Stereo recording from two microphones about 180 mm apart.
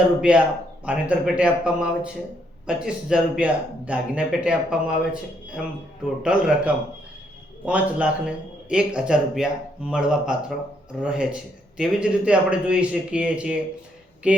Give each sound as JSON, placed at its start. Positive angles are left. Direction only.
{"t": 0.2, "sound": "speech", "side_deg": -5}